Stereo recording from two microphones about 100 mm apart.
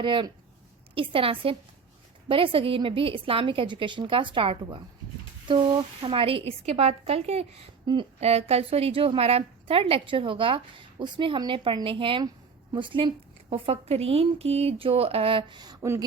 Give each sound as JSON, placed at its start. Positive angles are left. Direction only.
{"t": 0.0, "sound": "a woman's voice", "side_deg": -55}
{"t": 6.0, "sound": "a woman's voice", "side_deg": -65}
{"t": 7.9, "sound": "a woman's voice", "side_deg": -50}
{"t": 8.2, "sound": "a woman's voice", "side_deg": -90}